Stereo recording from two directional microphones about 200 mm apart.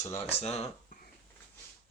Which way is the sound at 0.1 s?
30° left (ahead or behind).